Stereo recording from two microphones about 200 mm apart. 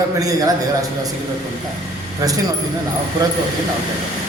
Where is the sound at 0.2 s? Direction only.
15° right (ahead or behind).